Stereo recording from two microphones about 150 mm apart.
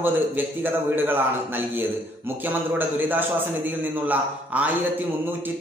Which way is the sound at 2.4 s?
10° right (ahead or behind).